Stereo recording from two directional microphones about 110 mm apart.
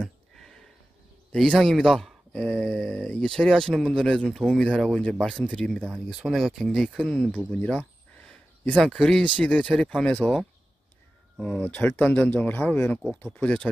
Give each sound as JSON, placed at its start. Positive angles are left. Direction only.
{"t": 0.0, "sound": "a sound", "side_deg": 5}
{"t": 1.3, "sound": "speech", "side_deg": 5}
{"t": 6.0, "sound": "speech", "side_deg": 0}
{"t": 7.5, "sound": "a sound", "side_deg": 10}
{"t": 8.7, "sound": "speech", "side_deg": 5}
{"t": 11.7, "sound": "speech", "side_deg": 15}